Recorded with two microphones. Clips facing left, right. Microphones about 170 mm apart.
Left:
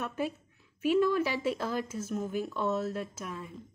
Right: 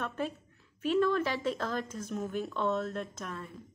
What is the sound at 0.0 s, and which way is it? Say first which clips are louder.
A woman's voice: left 1 dB; 10° left (ahead or behind).